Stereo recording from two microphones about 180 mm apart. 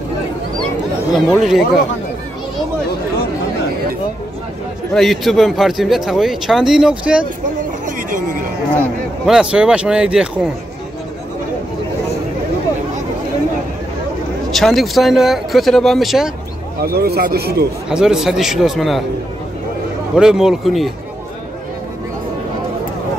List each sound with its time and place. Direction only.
1.1 s speech: centre (ahead or behind)
4.9 s speech: centre (ahead or behind)
7.8 s a sound: 50° right (ahead or behind)
8.7 s speech: centre (ahead or behind)
14.5 s speech: centre (ahead or behind)
16.8 s speech: 60° right (ahead or behind)
17.8 s speech: 5° right (ahead or behind)
20.2 s speech: 5° right (ahead or behind)